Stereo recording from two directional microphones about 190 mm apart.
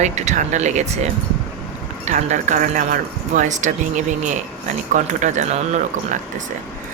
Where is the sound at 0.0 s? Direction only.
35° right (ahead or behind).